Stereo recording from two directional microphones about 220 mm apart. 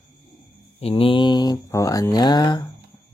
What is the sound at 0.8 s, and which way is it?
Speech, 25° left (ahead or behind).